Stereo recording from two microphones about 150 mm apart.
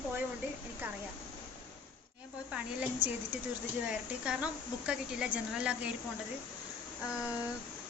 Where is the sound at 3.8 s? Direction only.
5° right (ahead or behind).